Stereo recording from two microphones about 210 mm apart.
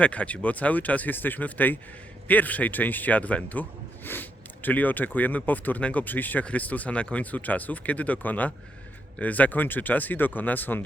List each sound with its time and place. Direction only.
0.0 s a man's voice: 5° left (ahead or behind)